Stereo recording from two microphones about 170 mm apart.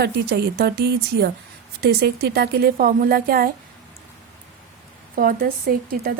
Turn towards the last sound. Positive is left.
turn(degrees=-60)  # may be behind; listen again after turning